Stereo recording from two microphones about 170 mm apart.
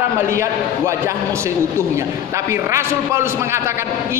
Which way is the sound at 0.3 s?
15° right (ahead or behind).